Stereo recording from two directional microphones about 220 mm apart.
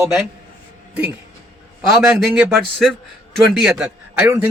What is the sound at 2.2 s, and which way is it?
A man's voice, 5° right (ahead or behind).